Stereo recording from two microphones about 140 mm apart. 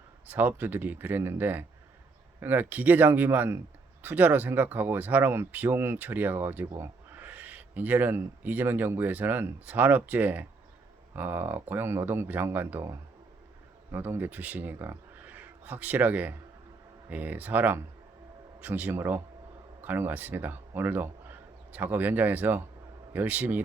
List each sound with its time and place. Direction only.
0.3 s a man's voice: 15° right (ahead or behind)